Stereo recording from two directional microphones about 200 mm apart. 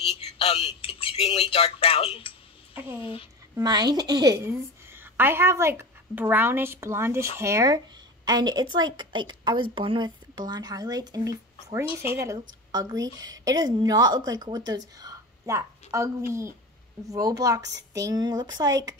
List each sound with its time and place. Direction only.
0.3 s speech: 30° left (ahead or behind)
3.6 s a woman's voice: 20° right (ahead or behind)
11.8 s speech: 25° left (ahead or behind)
12.1 s a woman's voice: 15° right (ahead or behind)